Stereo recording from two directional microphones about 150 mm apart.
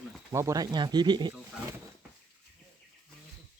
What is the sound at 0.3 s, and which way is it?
Speech, 20° right (ahead or behind).